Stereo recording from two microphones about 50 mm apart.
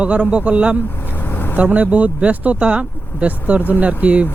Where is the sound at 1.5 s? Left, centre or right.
Right.